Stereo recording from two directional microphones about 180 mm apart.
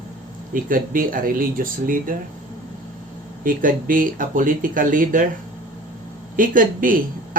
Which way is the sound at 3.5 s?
50° right (ahead or behind).